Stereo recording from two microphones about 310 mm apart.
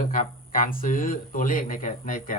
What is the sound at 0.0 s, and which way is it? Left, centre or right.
Speech, left.